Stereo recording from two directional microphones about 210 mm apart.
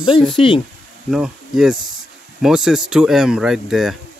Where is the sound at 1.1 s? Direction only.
Centre (ahead or behind).